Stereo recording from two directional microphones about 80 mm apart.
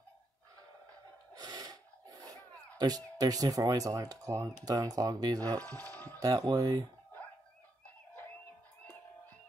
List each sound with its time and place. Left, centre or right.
1.3 s a sound: right
2.8 s speech: right
5.6 s speech: left
6.1 s speech: right